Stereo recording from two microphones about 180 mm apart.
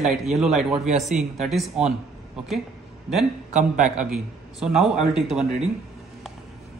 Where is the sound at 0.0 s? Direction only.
Centre (ahead or behind).